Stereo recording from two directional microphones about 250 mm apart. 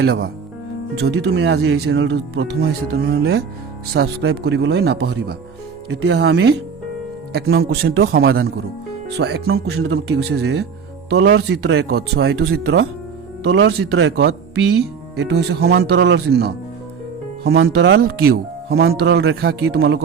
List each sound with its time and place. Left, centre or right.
0.0 s a man's voice: right
7.6 s a man's voice: right